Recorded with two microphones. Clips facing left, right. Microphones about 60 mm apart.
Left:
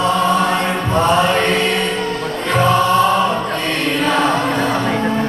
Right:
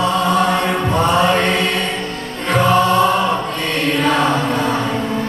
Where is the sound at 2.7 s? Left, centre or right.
Right.